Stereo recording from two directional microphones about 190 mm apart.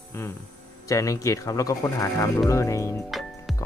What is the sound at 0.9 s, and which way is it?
Speech, 15° left (ahead or behind).